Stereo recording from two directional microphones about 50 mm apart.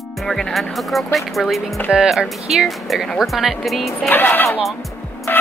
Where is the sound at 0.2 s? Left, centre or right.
Centre.